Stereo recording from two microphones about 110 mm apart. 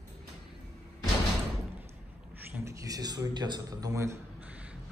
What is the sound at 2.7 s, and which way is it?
Speech, 30° right (ahead or behind).